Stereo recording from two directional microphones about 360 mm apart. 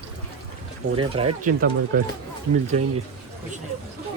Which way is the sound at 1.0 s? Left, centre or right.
Centre.